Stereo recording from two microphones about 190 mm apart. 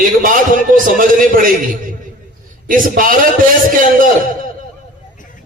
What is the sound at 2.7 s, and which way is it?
Speech, 45° right (ahead or behind).